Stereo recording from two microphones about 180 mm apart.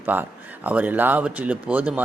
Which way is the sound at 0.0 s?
10° right (ahead or behind).